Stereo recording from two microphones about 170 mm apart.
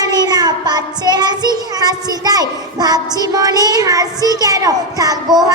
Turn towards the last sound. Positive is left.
turn(degrees=-25)  # may be behind; listen again after turning